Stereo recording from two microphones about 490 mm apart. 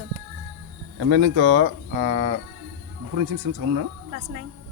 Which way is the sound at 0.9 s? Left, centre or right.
Right.